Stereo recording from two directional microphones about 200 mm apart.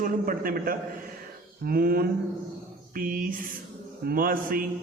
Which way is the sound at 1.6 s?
50° right (ahead or behind).